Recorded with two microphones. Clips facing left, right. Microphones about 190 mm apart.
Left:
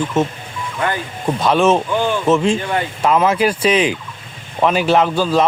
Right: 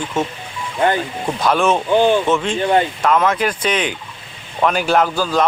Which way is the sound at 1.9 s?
25° right (ahead or behind).